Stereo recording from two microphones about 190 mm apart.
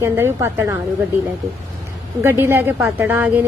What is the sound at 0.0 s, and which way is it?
Speech, 15° right (ahead or behind).